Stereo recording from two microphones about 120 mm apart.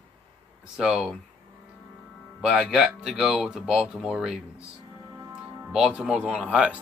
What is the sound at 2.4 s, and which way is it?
Speech, 5° right (ahead or behind).